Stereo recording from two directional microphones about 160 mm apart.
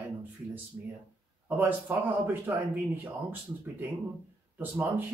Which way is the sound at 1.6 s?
10° right (ahead or behind).